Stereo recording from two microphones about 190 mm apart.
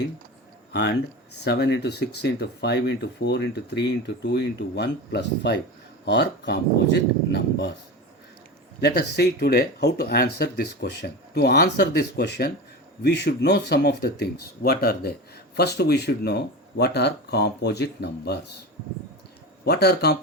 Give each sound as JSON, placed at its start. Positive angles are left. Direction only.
{"t": 0.7, "sound": "speech", "side_deg": 65}
{"t": 8.8, "sound": "speech", "side_deg": 60}
{"t": 19.6, "sound": "speech", "side_deg": 55}